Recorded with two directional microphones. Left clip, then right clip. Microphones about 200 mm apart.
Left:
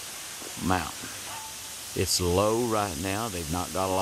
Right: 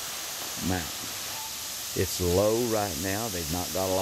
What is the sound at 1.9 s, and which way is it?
Speech, 15° left (ahead or behind).